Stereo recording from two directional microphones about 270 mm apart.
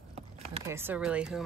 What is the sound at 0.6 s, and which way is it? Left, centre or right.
Speech, centre.